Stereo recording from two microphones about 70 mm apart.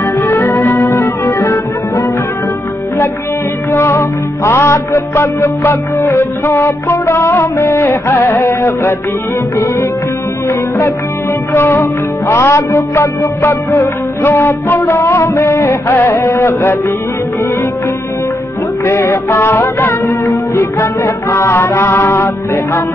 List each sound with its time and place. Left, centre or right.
0.2 s music: left
0.9 s music: left
3.7 s music: left
5.9 s speech: left
11.5 s speech: left
18.9 s speech: left